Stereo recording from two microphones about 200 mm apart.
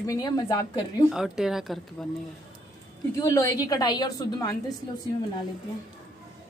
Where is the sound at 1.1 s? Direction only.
5° right (ahead or behind).